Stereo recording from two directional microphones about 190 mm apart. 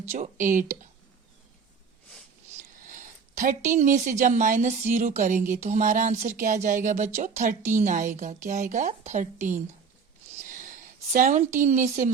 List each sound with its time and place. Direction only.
0.1 s speech: 40° right (ahead or behind)
2.7 s speech: 45° right (ahead or behind)
10.3 s a sound: 40° right (ahead or behind)
11.6 s speech: 40° right (ahead or behind)